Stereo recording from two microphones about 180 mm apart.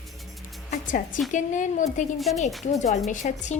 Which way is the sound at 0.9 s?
45° left (ahead or behind).